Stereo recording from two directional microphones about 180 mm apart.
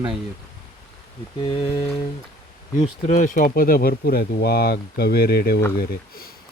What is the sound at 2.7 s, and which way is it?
Speech, 45° left (ahead or behind).